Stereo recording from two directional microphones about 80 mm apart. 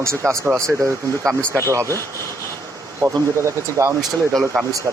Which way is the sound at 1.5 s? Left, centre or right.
Right.